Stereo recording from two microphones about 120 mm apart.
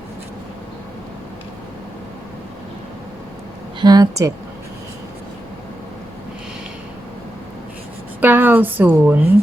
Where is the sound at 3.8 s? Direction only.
35° right (ahead or behind).